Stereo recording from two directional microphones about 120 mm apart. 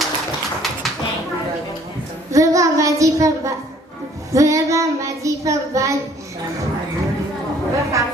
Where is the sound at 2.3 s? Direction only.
25° right (ahead or behind).